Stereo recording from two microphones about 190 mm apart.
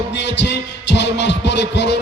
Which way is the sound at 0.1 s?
65° left (ahead or behind).